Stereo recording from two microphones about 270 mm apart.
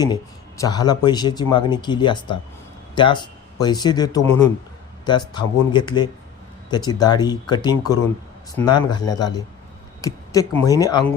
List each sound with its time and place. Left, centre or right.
0.0 s speech: centre
10.0 s a sound: centre
10.6 s speech: centre